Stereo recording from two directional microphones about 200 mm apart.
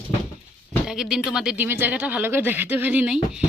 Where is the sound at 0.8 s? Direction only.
Centre (ahead or behind).